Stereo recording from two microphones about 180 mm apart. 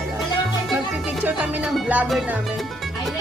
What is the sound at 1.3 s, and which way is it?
Music, 5° right (ahead or behind).